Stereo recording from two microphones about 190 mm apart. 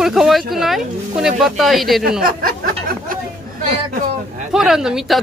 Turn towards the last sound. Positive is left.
turn(degrees=-5)  # may be behind; listen again after turning